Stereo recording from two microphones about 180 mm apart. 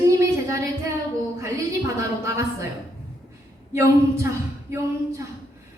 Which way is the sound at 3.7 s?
15° right (ahead or behind).